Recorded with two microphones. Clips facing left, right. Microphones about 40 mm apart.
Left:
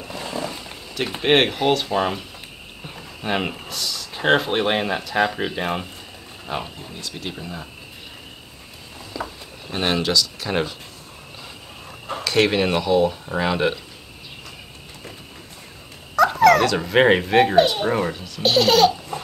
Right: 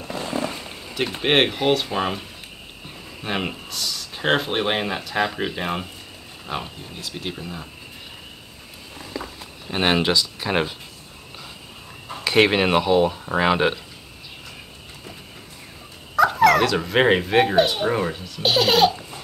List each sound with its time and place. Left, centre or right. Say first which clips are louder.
0.3 s a sound: right 1 dB; right
0.9 s speech: left 1 dB; centre
3.2 s speech: left 2 dB; centre
7.0 s speech: right 1 dB; centre
9.7 s speech: right 2 dB; right
12.3 s speech: right 2 dB; centre
16.2 s speech: left 1 dB; centre